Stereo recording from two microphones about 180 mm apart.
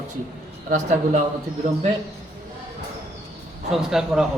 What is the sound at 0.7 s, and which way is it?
Speech, 45° right (ahead or behind).